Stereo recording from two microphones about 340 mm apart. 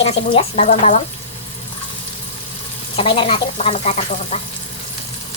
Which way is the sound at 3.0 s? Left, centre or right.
Centre.